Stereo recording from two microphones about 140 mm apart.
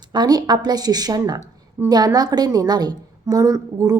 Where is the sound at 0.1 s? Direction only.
30° right (ahead or behind).